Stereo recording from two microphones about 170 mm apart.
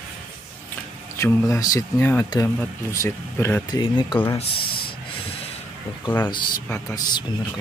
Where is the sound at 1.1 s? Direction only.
15° left (ahead or behind).